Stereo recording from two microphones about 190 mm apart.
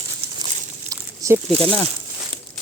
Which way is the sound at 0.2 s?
30° right (ahead or behind).